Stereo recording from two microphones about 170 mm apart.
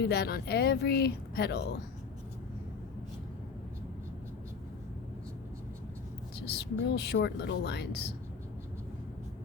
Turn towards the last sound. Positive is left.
turn(degrees=75)  # may be behind; listen again after turning